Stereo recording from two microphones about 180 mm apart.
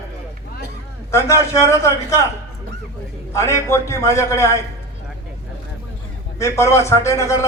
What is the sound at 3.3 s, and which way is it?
A man's voice, 15° left (ahead or behind).